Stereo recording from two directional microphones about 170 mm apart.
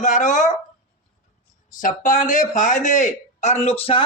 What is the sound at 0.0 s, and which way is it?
Speech, 45° left (ahead or behind).